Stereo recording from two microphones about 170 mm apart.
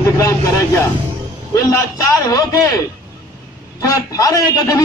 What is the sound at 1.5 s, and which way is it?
A man's voice, 20° left (ahead or behind).